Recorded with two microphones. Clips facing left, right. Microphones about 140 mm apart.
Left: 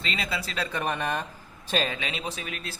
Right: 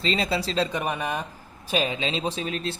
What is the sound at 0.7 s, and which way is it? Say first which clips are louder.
Speech: right 1 dB; 10° right (ahead or behind).